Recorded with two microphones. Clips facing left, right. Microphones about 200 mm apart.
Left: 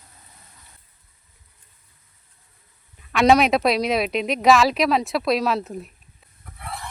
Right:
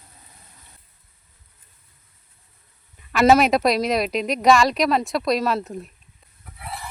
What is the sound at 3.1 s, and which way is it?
Speech, centre (ahead or behind).